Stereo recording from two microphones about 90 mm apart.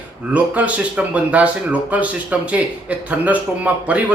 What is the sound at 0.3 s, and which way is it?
Speech, 15° right (ahead or behind).